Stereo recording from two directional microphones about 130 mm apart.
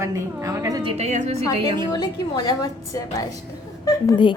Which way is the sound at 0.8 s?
50° right (ahead or behind).